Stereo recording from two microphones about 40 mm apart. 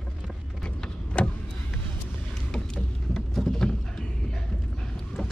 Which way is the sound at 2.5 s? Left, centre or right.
Centre.